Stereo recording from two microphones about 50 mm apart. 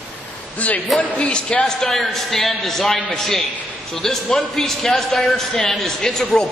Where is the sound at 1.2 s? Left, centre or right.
Left.